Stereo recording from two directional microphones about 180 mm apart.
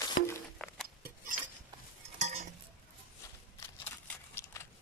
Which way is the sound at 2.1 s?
40° right (ahead or behind).